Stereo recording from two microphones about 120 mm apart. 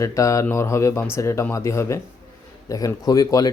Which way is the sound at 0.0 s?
25° left (ahead or behind).